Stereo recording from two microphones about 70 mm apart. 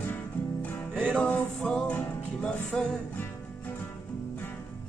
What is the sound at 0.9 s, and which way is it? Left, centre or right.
Music, right.